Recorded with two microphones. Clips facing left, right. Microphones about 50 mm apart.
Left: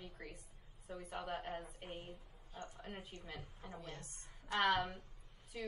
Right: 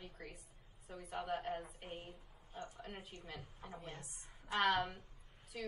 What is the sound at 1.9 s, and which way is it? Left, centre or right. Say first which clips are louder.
Speech: even; right.